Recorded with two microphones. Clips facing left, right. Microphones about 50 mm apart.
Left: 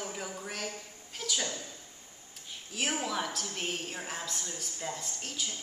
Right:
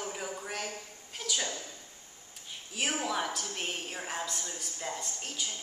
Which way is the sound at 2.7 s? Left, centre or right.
Centre.